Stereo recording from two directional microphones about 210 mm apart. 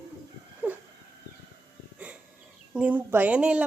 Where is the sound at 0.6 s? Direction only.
10° right (ahead or behind).